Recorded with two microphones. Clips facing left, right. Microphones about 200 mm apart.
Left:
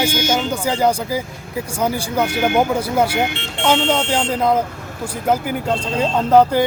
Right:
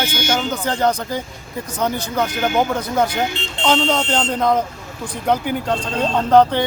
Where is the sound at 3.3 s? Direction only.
65° left (ahead or behind).